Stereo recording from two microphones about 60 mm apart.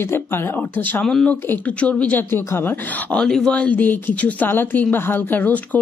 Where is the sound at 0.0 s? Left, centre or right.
Left.